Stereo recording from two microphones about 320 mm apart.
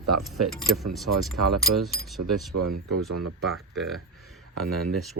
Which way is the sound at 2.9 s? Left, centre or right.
Right.